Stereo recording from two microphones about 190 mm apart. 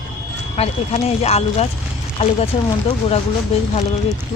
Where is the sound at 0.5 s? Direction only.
30° left (ahead or behind).